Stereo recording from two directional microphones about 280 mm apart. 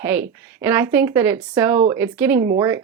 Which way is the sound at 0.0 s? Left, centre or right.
Centre.